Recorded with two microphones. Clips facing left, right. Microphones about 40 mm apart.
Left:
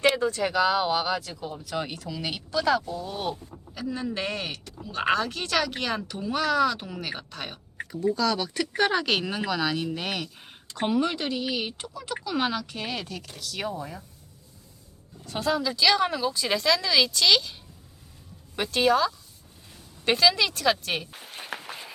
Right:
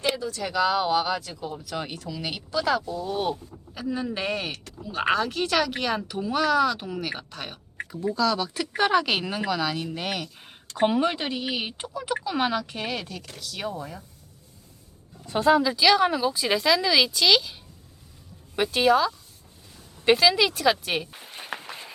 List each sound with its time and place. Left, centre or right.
0.2 s speech: left
0.4 s speech: centre
10.8 s speech: centre
12.9 s speech: centre
15.3 s speech: right; by 17.5 s centre
18.5 s speech: centre
21.2 s a sound: centre